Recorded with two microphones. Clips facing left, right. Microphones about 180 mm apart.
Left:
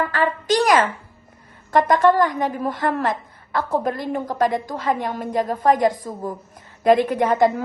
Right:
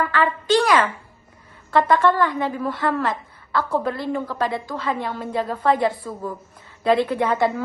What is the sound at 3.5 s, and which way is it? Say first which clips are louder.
Speech: even; 15° left (ahead or behind).